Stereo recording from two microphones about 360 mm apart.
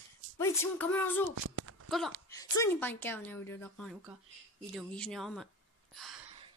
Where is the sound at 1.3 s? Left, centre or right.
Right.